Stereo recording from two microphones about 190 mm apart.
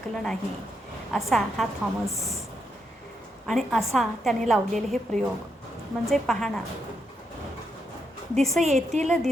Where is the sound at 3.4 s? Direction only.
Centre (ahead or behind).